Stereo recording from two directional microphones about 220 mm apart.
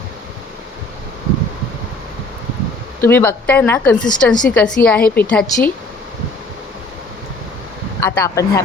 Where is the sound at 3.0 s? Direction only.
10° left (ahead or behind).